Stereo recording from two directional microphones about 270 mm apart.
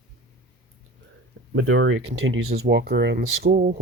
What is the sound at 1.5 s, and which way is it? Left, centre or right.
Speech, right.